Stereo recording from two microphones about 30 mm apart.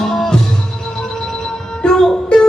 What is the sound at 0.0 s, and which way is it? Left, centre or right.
Music, centre.